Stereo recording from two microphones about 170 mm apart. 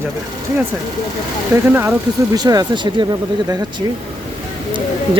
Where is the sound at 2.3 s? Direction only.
20° right (ahead or behind).